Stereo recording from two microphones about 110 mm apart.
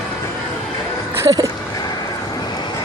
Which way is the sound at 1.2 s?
30° right (ahead or behind).